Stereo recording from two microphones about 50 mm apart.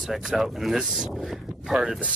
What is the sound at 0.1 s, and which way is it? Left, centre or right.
Speech, centre.